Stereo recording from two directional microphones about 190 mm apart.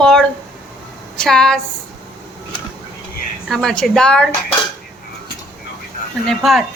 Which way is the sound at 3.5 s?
Centre (ahead or behind).